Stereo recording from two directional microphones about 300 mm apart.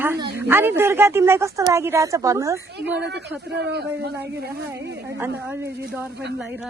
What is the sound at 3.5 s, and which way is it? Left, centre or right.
Speech, right.